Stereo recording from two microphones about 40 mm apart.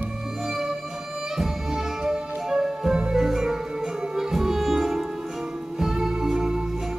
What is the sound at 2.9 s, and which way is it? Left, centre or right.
Music, right.